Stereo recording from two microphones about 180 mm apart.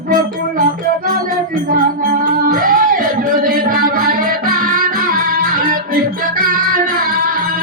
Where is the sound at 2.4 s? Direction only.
50° right (ahead or behind).